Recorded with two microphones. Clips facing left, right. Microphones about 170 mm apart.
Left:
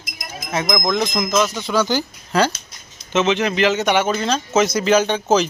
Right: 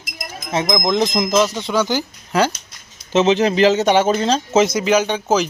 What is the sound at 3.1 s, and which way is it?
A woman's voice, 35° right (ahead or behind).